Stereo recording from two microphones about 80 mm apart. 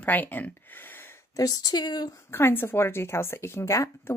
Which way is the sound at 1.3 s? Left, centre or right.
Left.